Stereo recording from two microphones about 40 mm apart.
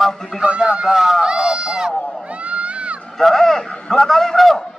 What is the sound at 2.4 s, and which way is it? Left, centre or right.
Crowd, right.